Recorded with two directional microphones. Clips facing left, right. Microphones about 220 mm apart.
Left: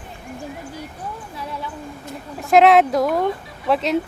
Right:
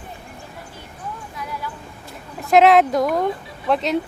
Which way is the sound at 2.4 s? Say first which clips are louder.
Even; centre (ahead or behind).